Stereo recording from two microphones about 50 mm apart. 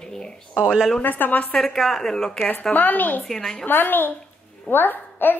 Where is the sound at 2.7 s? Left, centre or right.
Left.